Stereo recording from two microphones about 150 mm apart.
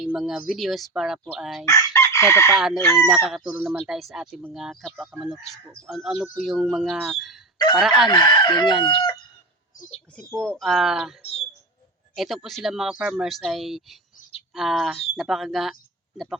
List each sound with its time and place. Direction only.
0.0 s speech: 5° right (ahead or behind)
1.6 s chicken: 20° left (ahead or behind)
2.5 s speech: 5° right (ahead or behind)
8.0 s chicken: 30° left (ahead or behind)
10.3 s speech: 5° left (ahead or behind)
11.2 s speech: 45° left (ahead or behind)
12.1 s speech: centre (ahead or behind)